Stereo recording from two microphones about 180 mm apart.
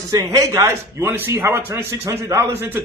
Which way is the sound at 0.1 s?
20° right (ahead or behind).